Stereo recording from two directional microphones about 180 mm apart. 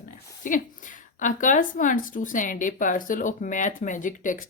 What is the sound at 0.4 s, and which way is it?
A woman's voice, 45° left (ahead or behind).